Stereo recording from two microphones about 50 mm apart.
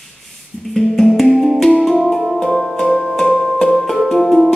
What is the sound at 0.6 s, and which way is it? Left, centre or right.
Music, centre.